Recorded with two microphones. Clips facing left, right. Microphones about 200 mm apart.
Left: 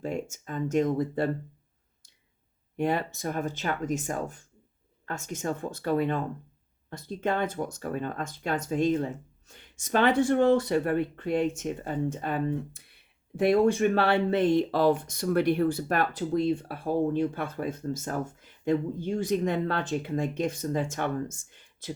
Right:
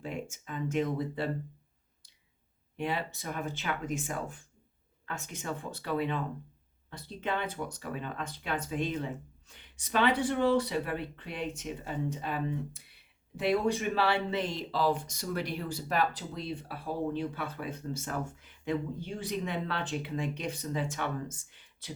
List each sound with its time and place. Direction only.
0.0 s speech: 45° left (ahead or behind)
2.7 s speech: 45° left (ahead or behind)